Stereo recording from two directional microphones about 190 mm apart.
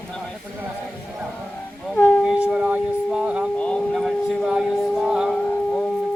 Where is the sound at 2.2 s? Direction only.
5° right (ahead or behind).